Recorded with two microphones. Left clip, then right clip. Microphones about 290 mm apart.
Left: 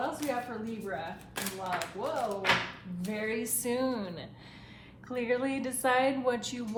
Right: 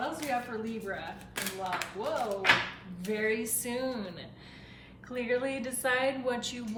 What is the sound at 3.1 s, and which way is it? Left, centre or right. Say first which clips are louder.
A woman's voice: right 3 dB; centre.